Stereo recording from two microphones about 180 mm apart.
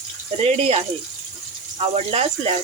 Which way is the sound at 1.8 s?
35° right (ahead or behind).